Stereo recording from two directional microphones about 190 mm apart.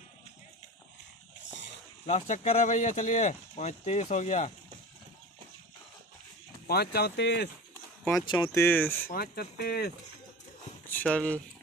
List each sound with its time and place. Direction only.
1.4 s a sound: 70° left (ahead or behind)
2.0 s speech: 40° left (ahead or behind)
6.7 s speech: 55° left (ahead or behind)
8.3 s speech: 20° left (ahead or behind)
9.0 s speech: 50° left (ahead or behind)
10.9 s speech: 5° left (ahead or behind)